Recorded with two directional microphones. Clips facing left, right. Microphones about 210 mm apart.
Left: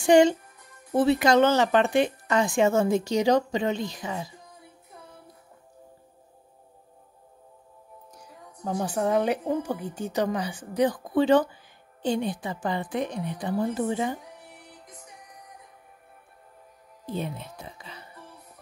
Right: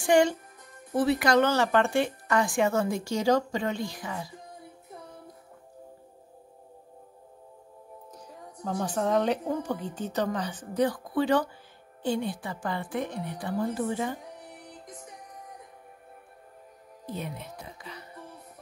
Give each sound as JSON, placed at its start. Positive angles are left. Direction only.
{"t": 0.0, "sound": "a child's voice", "side_deg": 20}
{"t": 8.2, "sound": "a woman's voice", "side_deg": 10}
{"t": 17.0, "sound": "music", "side_deg": 30}